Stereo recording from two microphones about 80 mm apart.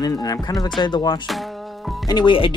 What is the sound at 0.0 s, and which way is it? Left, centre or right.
Speech, left.